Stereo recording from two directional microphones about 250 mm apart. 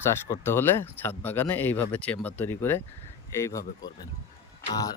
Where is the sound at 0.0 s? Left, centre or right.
Centre.